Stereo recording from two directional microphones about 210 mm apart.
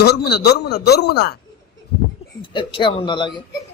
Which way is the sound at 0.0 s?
50° left (ahead or behind).